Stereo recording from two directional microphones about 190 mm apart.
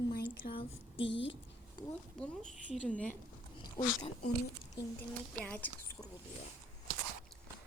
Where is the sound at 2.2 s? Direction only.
5° left (ahead or behind).